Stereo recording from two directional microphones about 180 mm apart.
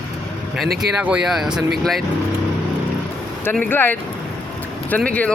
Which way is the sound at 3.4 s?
10° left (ahead or behind).